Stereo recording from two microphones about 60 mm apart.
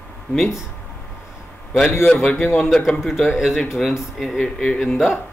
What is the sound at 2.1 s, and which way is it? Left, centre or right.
Speech, centre.